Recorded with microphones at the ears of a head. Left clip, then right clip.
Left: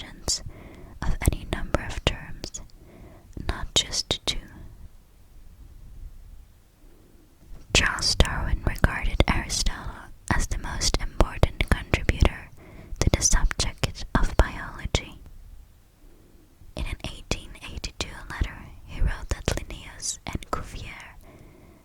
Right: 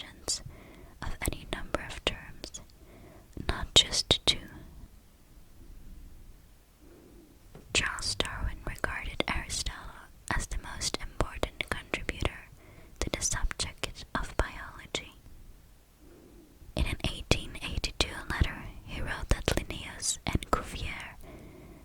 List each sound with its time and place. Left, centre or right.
0.1 s whispering: left
3.4 s whispering: centre
7.7 s whispering: left
17.8 s whispering: centre